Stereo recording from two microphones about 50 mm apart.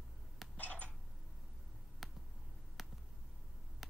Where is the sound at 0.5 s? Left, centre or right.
Left.